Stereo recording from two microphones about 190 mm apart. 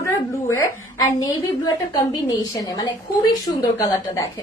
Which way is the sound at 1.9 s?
20° left (ahead or behind).